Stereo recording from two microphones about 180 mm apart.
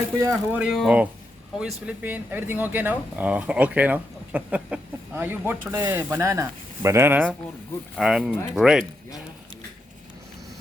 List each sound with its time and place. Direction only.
0.2 s speech: 15° right (ahead or behind)
0.6 s speech: 5° right (ahead or behind)